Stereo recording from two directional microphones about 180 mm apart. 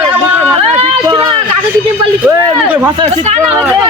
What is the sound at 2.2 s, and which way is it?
Speech, 10° right (ahead or behind).